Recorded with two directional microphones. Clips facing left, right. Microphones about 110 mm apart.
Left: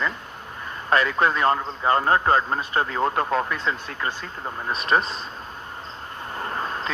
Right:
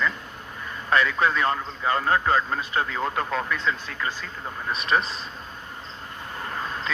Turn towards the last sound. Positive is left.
turn(degrees=30)  # may be behind; listen again after turning